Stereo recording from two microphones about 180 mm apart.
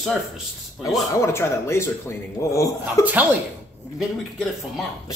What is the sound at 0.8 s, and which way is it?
Speech, 5° right (ahead or behind).